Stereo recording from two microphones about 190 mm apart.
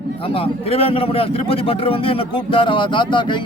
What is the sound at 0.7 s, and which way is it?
A man's voice, 30° left (ahead or behind).